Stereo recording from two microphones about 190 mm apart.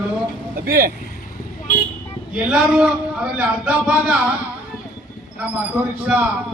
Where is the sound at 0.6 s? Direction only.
50° right (ahead or behind).